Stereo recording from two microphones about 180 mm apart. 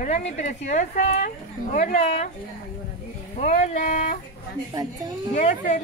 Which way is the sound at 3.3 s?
45° left (ahead or behind).